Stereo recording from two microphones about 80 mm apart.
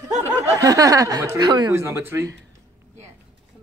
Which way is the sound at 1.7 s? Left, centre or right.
Right.